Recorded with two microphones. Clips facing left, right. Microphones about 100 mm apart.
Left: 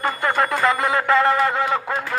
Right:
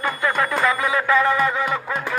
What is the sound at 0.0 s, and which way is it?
Music, 35° left (ahead or behind).